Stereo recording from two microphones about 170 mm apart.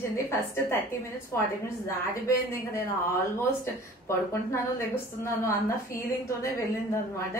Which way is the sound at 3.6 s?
15° left (ahead or behind).